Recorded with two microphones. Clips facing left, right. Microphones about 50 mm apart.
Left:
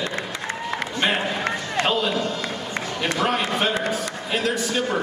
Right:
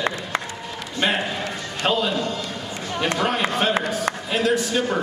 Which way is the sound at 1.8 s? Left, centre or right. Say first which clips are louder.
Right 1 dB; centre.